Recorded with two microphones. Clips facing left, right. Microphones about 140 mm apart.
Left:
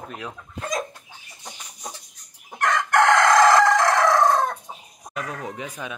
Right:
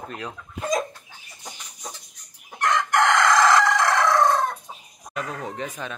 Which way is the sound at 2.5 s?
55° left (ahead or behind).